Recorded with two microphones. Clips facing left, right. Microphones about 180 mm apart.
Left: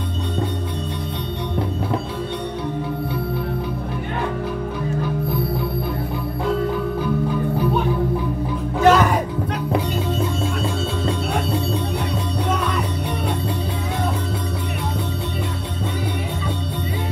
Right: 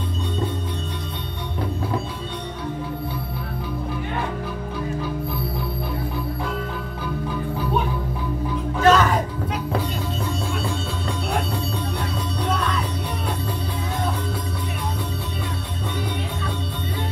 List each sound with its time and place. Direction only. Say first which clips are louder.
8.8 s music: left 2 dB; 10° left (ahead or behind)